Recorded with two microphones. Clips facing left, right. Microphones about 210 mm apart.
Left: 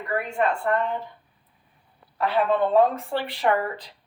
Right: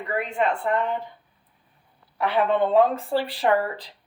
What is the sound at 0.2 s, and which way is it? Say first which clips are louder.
Speech: right 1 dB; 20° right (ahead or behind).